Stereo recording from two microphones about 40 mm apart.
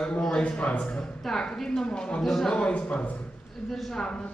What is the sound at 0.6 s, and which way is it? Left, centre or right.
Speech, left.